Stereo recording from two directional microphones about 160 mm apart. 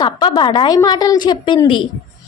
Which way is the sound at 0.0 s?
30° left (ahead or behind).